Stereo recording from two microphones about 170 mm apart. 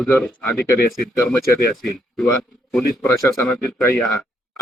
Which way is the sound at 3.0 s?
15° left (ahead or behind).